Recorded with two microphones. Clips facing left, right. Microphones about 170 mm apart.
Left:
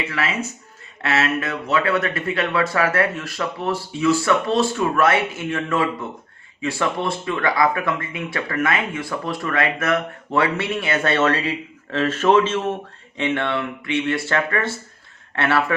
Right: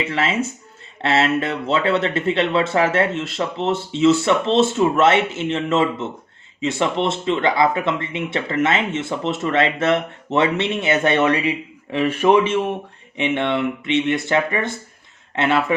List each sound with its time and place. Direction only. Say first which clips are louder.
0.1 s speech: right 4 dB; 25° right (ahead or behind)